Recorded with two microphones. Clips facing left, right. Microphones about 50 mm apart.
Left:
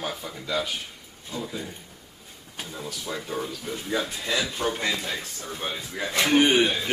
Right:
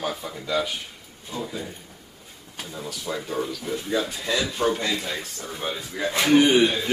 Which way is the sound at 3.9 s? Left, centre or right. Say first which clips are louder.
Right 1 dB; centre.